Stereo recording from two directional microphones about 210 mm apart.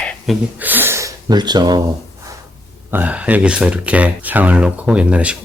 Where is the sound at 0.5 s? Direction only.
10° right (ahead or behind).